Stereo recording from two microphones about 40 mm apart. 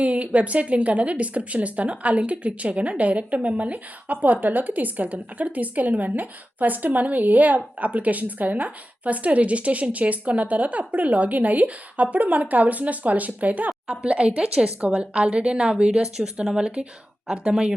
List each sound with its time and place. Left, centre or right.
0.0 s a woman's voice: right
14.0 s speech: right